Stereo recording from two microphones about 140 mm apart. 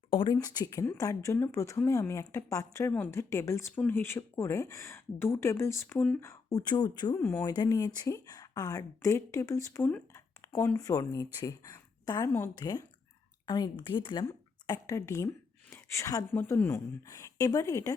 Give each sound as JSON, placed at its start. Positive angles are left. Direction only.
{"t": 0.1, "sound": "speech", "side_deg": 35}
{"t": 0.3, "sound": "speech", "side_deg": 25}
{"t": 7.2, "sound": "speech", "side_deg": 15}
{"t": 7.5, "sound": "speech", "side_deg": 30}